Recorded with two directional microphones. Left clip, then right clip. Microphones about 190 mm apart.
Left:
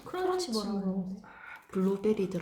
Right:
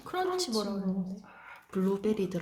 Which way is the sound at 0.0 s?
55° right (ahead or behind).